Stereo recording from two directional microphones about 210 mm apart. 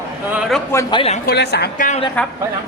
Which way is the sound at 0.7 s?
20° left (ahead or behind).